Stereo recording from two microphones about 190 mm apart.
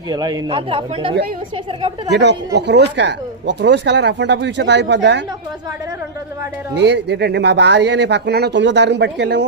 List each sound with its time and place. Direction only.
0.1 s speech: 20° right (ahead or behind)
2.1 s speech: 65° right (ahead or behind)
6.7 s speech: 65° right (ahead or behind)